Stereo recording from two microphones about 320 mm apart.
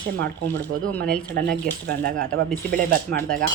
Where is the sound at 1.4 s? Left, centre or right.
Right.